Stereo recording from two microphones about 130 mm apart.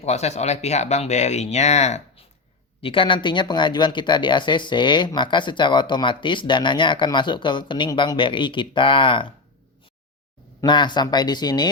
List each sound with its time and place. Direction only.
0.0 s speech: 60° left (ahead or behind)
2.8 s speech: 40° left (ahead or behind)
10.7 s speech: 35° left (ahead or behind)